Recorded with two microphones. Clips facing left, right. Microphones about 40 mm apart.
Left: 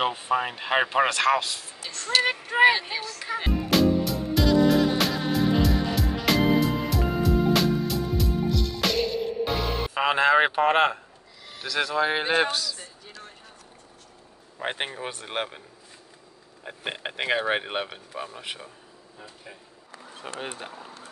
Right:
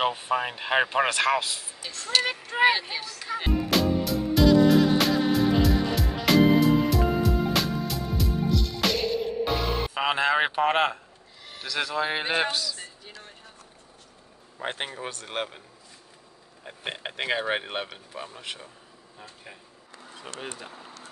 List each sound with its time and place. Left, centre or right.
0.0 s speech: centre
2.2 s speech: centre
2.9 s speech: centre
3.3 s music: centre
11.6 s speech: centre
14.6 s speech: centre
16.6 s speech: centre
20.2 s speech: left